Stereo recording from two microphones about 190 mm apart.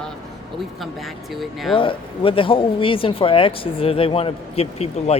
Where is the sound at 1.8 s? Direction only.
30° left (ahead or behind).